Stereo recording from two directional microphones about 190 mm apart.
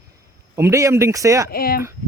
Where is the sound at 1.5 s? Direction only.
55° left (ahead or behind).